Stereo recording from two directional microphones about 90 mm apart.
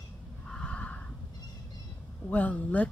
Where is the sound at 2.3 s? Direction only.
15° left (ahead or behind).